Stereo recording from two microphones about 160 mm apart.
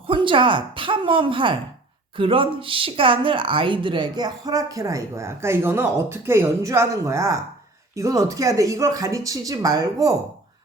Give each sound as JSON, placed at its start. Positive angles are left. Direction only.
{"t": 0.1, "sound": "a woman's voice", "side_deg": -30}